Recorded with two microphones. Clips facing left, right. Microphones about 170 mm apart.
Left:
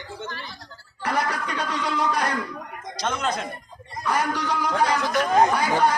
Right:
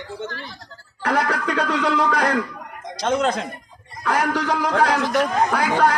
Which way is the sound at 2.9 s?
65° right (ahead or behind).